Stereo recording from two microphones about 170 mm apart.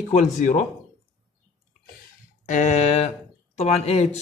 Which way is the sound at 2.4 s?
45° left (ahead or behind).